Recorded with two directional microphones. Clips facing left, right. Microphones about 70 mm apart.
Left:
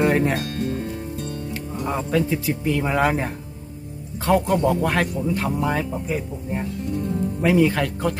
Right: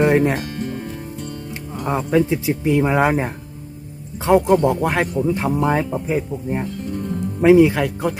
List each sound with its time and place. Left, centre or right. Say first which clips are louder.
0.0 s speech: right 3 dB; centre
1.8 s speech: right 5 dB; right